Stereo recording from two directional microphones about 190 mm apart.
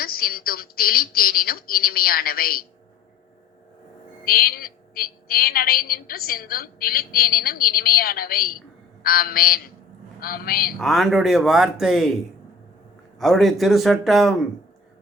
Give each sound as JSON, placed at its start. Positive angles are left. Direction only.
{"t": 0.0, "sound": "a woman's voice", "side_deg": 50}
{"t": 4.3, "sound": "a woman's voice", "side_deg": 50}
{"t": 10.8, "sound": "speech", "side_deg": 0}
{"t": 13.1, "sound": "speech", "side_deg": 0}